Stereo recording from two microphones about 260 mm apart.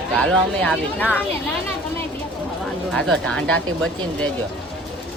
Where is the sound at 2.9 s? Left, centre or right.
Centre.